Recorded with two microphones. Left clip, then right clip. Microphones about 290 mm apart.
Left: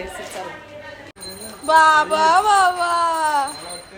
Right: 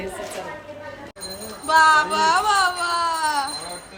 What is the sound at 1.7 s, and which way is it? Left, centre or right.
Speech, centre.